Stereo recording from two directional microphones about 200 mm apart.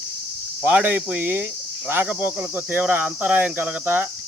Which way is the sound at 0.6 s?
10° right (ahead or behind).